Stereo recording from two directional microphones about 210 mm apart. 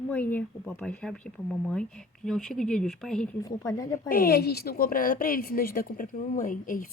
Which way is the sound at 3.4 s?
15° left (ahead or behind).